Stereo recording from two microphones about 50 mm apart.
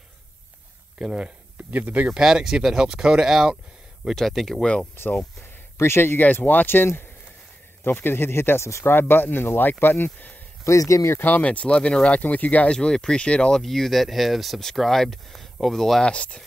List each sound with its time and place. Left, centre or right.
0.9 s speech: centre
1.6 s speech: right
2.0 s speech: centre
4.1 s speech: centre
5.0 s speech: left
6.1 s speech: left
8.8 s speech: left
10.6 s speech: left
11.1 s speech: left
11.4 s speech: left
12.6 s speech: centre
13.6 s speech: centre
16.0 s speech: left